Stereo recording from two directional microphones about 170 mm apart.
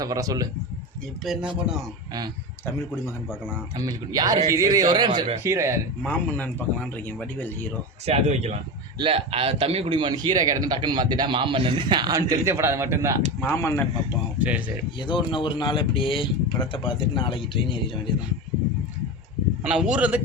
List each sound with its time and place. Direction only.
0.0 s a man's voice: 20° right (ahead or behind)
1.2 s a man's voice: 5° right (ahead or behind)
3.8 s a man's voice: 25° right (ahead or behind)
6.0 s speech: 10° left (ahead or behind)
8.0 s a man's voice: 40° right (ahead or behind); by 13.2 s 15° right (ahead or behind)
13.4 s speech: 15° left (ahead or behind)
14.3 s speech: 10° right (ahead or behind)
14.9 s speech: 30° left (ahead or behind)
19.6 s a man's voice: 5° right (ahead or behind)